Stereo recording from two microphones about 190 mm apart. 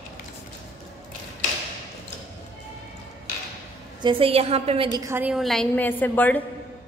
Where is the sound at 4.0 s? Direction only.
25° right (ahead or behind).